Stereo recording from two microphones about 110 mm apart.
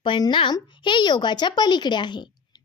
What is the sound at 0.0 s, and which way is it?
A woman's voice, 45° left (ahead or behind).